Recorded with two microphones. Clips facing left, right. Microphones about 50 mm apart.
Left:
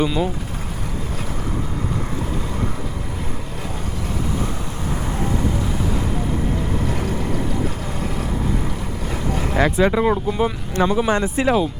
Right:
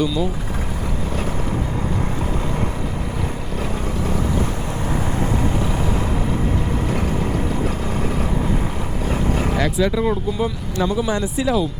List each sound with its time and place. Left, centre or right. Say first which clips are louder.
6.8 s vehicle: right 2 dB; right
9.0 s vehicle: right 3 dB; right
9.6 s speech: left 5 dB; left